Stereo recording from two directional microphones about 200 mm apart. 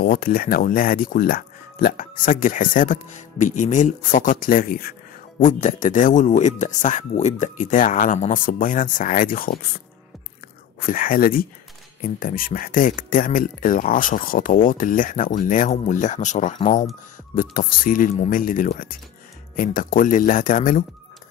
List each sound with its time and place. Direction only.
0.0 s speech: 45° left (ahead or behind)
10.9 s speech: 45° left (ahead or behind)